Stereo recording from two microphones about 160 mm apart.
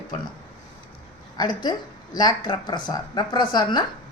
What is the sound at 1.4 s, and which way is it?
Speech, 25° left (ahead or behind).